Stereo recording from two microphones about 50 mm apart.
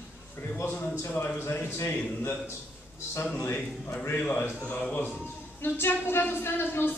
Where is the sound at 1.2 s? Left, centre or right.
Left.